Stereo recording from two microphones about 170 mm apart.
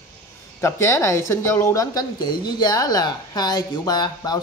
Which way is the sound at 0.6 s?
15° left (ahead or behind).